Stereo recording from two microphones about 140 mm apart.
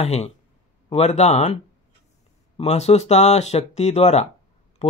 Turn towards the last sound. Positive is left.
turn(degrees=50)  # may be behind; listen again after turning